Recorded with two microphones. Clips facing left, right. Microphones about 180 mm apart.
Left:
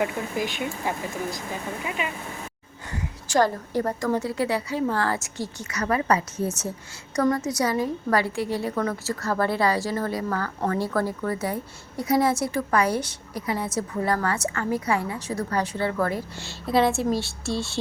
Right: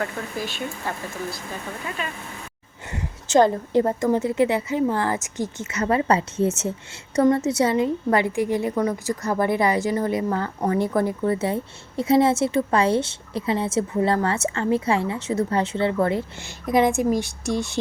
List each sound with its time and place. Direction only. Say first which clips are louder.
0.0 s speech: left 2 dB; 15° left (ahead or behind)
2.9 s a woman's voice: right 5 dB; 20° right (ahead or behind)